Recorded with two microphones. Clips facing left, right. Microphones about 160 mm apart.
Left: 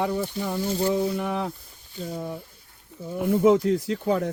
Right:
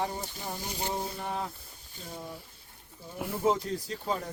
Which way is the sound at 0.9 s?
80° left.